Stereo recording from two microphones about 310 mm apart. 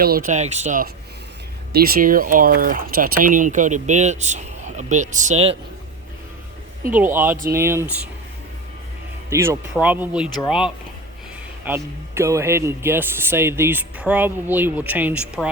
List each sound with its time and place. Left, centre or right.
0.0 s speech: right
6.9 s a man's voice: centre
9.3 s a man's voice: centre
11.6 s a man's voice: centre